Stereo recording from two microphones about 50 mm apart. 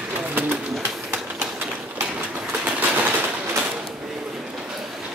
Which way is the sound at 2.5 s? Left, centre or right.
Right.